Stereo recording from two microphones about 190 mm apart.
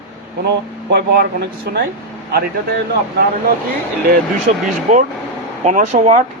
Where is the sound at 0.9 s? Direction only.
60° right (ahead or behind).